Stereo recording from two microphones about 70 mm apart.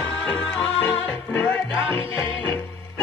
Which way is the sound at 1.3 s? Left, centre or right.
Left.